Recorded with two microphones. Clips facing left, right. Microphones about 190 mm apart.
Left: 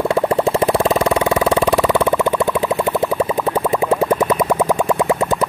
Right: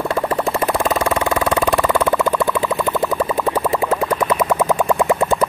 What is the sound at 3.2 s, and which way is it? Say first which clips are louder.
Boing: left 1 dB; 25° left (ahead or behind).